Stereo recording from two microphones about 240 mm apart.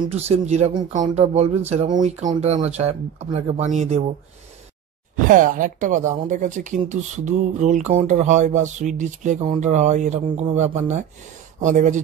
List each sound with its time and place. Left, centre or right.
0.1 s speech: right
5.1 s speech: right